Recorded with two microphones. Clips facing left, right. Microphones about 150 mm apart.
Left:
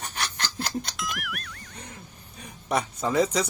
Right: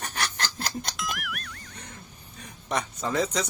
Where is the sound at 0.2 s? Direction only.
45° right (ahead or behind).